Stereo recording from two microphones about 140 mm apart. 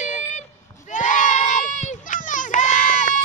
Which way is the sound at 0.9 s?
60° left (ahead or behind).